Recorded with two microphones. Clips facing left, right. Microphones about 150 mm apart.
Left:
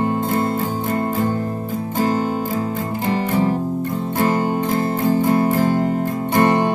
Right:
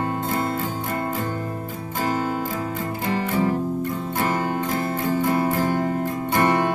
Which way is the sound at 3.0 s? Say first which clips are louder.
Left 3 dB; 30° left (ahead or behind).